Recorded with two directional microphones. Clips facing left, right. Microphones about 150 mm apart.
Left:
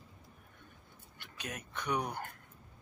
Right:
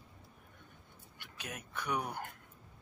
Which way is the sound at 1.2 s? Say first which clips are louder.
Left 2 dB; 10° right (ahead or behind).